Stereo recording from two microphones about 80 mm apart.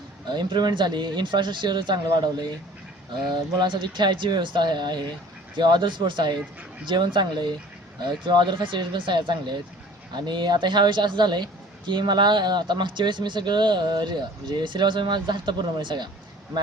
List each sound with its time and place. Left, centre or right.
0.3 s speech: right